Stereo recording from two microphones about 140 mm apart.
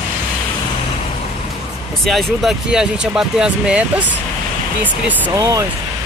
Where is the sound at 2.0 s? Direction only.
Centre (ahead or behind).